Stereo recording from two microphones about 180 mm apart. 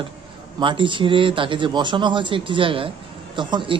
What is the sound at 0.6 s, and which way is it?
Speech, 25° right (ahead or behind).